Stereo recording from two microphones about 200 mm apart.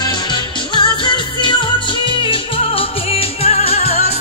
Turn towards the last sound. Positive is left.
turn(degrees=30)  # may be behind; listen again after turning